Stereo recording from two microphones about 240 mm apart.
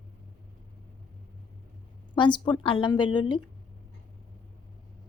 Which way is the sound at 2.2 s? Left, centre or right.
Centre.